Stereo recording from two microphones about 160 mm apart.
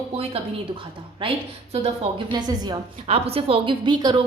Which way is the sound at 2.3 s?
25° right (ahead or behind).